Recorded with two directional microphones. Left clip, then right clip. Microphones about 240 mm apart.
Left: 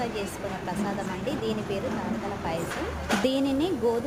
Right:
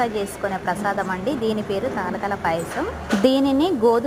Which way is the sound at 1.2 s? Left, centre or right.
Centre.